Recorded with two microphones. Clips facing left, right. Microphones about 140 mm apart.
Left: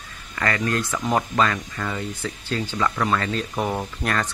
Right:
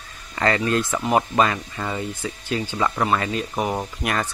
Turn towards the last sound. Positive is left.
turn(degrees=-10)  # may be behind; listen again after turning